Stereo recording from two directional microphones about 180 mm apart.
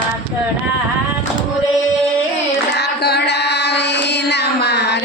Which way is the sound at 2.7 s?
65° left (ahead or behind).